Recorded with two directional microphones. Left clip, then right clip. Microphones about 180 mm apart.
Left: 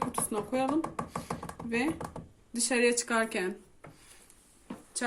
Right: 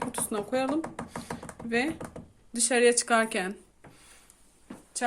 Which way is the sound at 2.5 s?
45° right (ahead or behind).